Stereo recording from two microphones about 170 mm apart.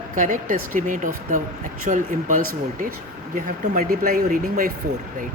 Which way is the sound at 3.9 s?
60° right (ahead or behind).